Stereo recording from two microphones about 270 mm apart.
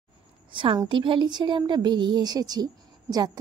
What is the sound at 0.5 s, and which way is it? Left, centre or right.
A woman's voice, centre.